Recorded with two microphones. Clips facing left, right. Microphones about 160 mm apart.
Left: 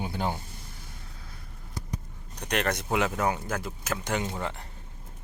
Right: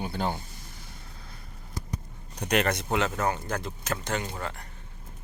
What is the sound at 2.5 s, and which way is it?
Speech, 5° right (ahead or behind).